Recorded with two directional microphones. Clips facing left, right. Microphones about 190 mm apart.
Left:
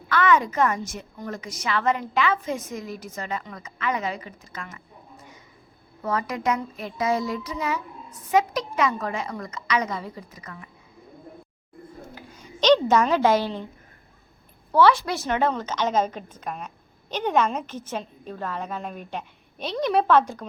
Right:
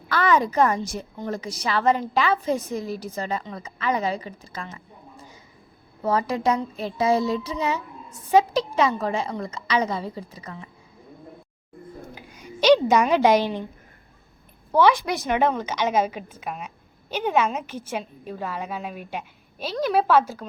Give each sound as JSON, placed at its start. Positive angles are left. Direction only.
{"t": 0.1, "sound": "a woman's voice", "side_deg": -35}
{"t": 12.1, "sound": "a sound", "side_deg": -10}
{"t": 14.7, "sound": "a woman's voice", "side_deg": -15}